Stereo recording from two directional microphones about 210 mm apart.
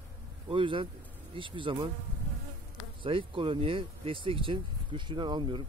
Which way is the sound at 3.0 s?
25° right (ahead or behind).